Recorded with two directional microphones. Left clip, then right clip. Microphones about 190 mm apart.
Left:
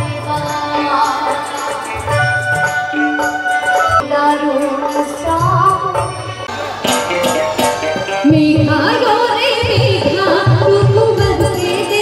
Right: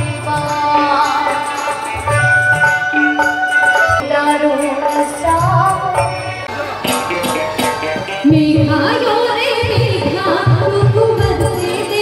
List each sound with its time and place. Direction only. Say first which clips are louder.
2.6 s music: right 3 dB; 15° left (ahead or behind)
6.9 s music: left 3 dB; 35° left (ahead or behind)